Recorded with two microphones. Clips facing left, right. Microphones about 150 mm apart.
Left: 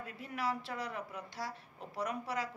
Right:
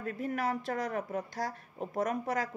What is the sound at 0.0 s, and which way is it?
A woman's voice, 45° right (ahead or behind).